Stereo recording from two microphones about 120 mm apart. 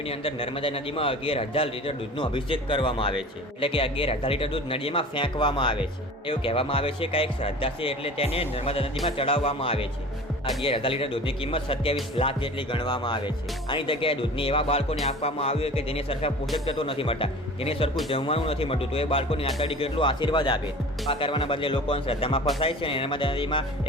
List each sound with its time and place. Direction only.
0.0 s a man's voice: 50° left (ahead or behind)
15.0 s music: 55° left (ahead or behind)
16.6 s a man's voice: 50° left (ahead or behind)